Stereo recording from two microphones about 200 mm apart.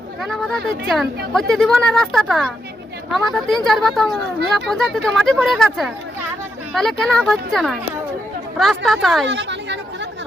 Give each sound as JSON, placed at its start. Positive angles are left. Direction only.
{"t": 0.2, "sound": "speech", "side_deg": 0}
{"t": 9.2, "sound": "chatter", "side_deg": -60}